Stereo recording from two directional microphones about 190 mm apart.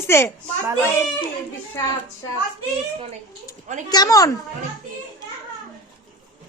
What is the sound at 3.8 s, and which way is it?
Speech, 20° left (ahead or behind).